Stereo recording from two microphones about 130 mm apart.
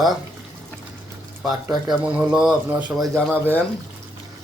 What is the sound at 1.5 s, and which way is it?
Speech, 30° right (ahead or behind).